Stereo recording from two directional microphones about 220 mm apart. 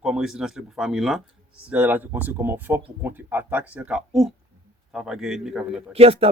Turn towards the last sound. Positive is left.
turn(degrees=-25)  # may be behind; listen again after turning